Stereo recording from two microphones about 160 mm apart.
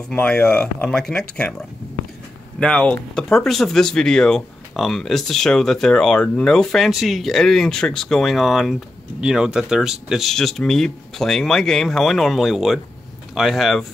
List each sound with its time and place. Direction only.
0.1 s speech: 10° left (ahead or behind)
2.6 s speech: 5° left (ahead or behind)